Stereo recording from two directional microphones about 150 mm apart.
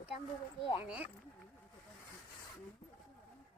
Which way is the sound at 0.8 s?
10° right (ahead or behind).